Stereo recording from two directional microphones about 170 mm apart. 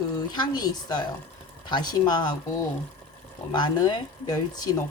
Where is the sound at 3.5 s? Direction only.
25° left (ahead or behind).